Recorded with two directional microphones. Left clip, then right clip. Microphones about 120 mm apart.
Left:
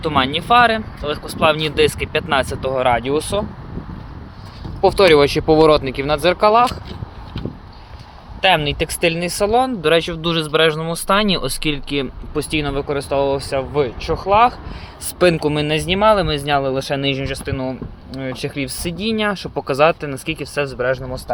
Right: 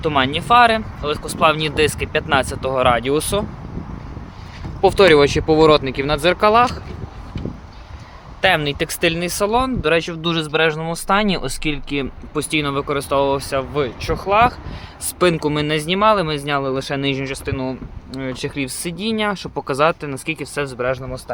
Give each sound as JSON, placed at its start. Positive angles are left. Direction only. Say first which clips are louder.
{"t": 0.0, "sound": "speech", "louder": "even", "side_deg": -15}
{"t": 4.8, "sound": "speech", "louder": "even", "side_deg": -15}
{"t": 8.4, "sound": "speech", "louder": "left 1 dB", "side_deg": -15}
{"t": 12.0, "sound": "speech", "louder": "left 1 dB", "side_deg": -15}
{"t": 15.0, "sound": "speech", "louder": "left 2 dB", "side_deg": -5}